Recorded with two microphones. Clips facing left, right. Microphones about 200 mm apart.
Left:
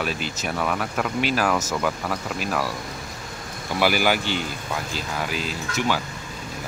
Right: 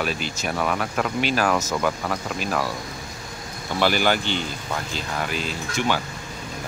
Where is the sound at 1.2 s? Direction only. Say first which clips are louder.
Even; centre (ahead or behind).